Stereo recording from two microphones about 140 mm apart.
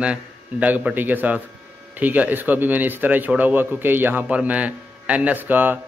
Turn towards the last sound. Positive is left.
turn(degrees=-10)  # may be behind; listen again after turning